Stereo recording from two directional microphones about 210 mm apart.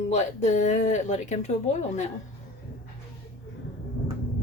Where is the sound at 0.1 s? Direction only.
35° left (ahead or behind).